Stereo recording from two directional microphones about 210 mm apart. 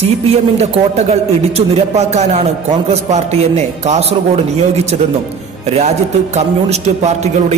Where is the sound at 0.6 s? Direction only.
30° right (ahead or behind).